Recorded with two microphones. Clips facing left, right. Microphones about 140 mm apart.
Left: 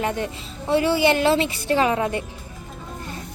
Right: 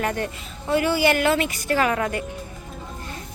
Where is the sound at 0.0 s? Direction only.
20° left (ahead or behind).